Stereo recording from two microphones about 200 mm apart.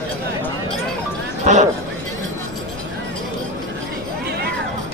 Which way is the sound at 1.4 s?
35° right (ahead or behind).